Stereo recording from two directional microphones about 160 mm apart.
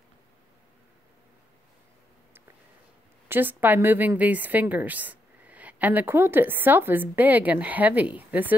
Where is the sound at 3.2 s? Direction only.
10° right (ahead or behind).